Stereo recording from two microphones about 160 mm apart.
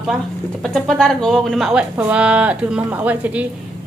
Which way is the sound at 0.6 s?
Centre (ahead or behind).